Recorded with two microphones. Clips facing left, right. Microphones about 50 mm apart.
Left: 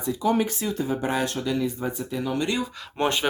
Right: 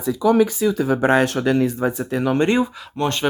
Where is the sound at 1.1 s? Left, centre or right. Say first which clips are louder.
Right 9 dB; right.